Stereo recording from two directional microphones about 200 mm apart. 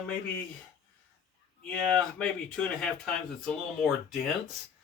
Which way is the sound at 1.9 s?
5° left (ahead or behind).